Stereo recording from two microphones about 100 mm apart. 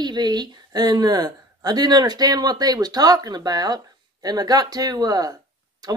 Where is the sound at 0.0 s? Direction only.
45° right (ahead or behind).